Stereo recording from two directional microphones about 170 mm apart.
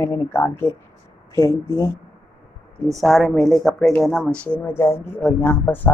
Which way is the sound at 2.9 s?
Centre (ahead or behind).